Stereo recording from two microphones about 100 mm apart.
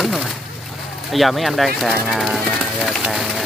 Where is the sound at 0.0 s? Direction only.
Centre (ahead or behind).